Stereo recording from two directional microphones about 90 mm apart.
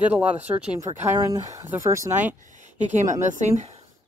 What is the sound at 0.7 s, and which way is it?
Speech, 35° right (ahead or behind).